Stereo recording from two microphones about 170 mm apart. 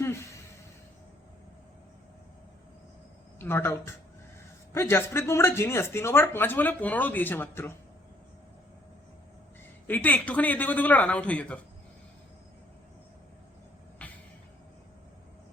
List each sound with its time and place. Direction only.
0.0 s a sound: 15° left (ahead or behind)
3.3 s speech: 15° left (ahead or behind)
9.8 s speech: 10° left (ahead or behind)
14.0 s vehicle: 10° left (ahead or behind)